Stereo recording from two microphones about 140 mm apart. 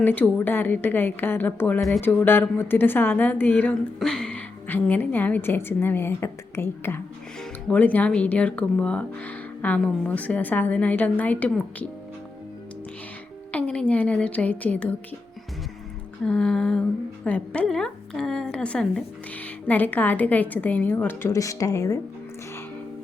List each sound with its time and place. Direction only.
0.0 s a woman's voice: 10° left (ahead or behind)
13.5 s a woman's voice: 10° left (ahead or behind)
16.2 s a woman's voice: 5° left (ahead or behind); by 21.9 s 25° left (ahead or behind)